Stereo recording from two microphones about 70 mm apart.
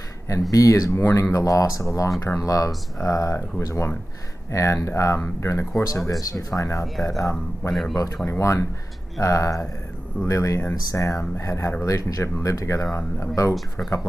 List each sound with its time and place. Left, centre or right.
0.5 s speech: left
0.9 s speech: left
7.7 s speech: centre
8.3 s speech: left